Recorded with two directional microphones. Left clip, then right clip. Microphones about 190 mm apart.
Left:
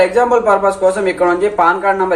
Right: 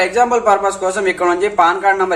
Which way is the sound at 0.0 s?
20° right (ahead or behind).